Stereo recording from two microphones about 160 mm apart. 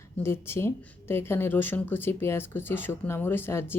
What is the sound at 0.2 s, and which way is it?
Speech, 15° left (ahead or behind).